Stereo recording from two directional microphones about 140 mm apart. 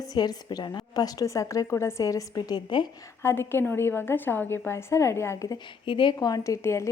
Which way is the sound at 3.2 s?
15° left (ahead or behind).